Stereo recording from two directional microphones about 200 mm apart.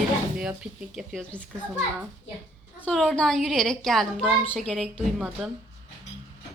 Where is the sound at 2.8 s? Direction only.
Centre (ahead or behind).